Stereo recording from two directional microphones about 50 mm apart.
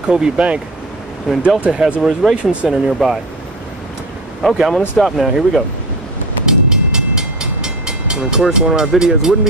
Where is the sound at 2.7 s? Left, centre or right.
Centre.